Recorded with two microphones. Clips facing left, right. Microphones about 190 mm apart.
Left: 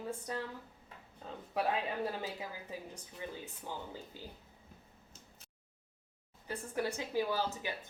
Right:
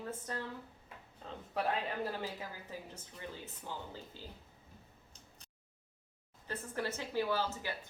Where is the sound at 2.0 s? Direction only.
15° left (ahead or behind).